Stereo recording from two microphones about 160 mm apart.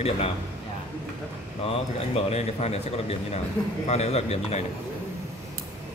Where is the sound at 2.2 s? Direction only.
40° left (ahead or behind).